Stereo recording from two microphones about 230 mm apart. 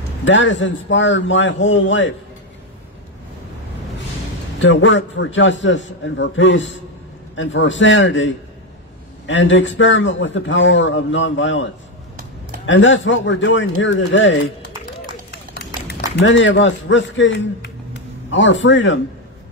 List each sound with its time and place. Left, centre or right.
0.2 s a man's voice: left
4.6 s a man's voice: left
15.3 s run: left